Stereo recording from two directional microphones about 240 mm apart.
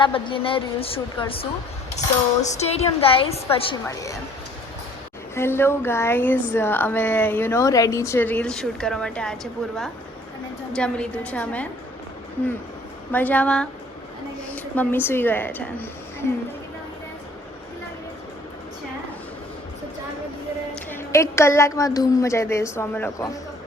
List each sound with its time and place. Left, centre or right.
0.0 s a woman's voice: left
3.8 s speech: centre
5.3 s a woman's voice: centre
13.1 s a woman's voice: centre
20.9 s speech: centre